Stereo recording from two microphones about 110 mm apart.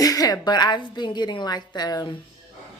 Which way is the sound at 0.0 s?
35° left (ahead or behind).